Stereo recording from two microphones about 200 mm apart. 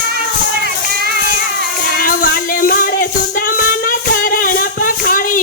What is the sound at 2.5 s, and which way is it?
Music, 45° left (ahead or behind).